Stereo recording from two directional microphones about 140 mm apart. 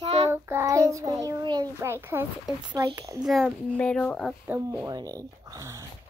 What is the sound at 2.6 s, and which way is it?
Speech, 30° right (ahead or behind).